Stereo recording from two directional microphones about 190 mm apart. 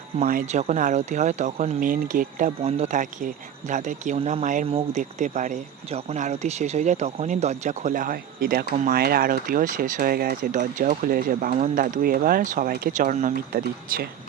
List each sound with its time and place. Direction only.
0.3 s speech: 45° right (ahead or behind)
2.6 s speech: 35° right (ahead or behind); by 14.1 s 50° right (ahead or behind)